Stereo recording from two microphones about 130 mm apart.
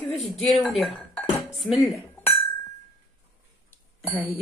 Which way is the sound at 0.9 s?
5° left (ahead or behind).